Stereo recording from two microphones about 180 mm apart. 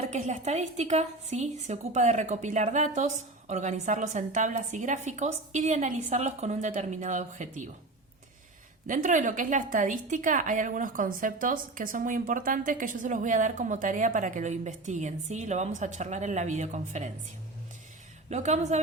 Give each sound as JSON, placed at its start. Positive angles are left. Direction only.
{"t": 0.1, "sound": "a woman's voice", "side_deg": -40}
{"t": 8.9, "sound": "a woman's voice", "side_deg": -45}
{"t": 18.3, "sound": "a woman's voice", "side_deg": -40}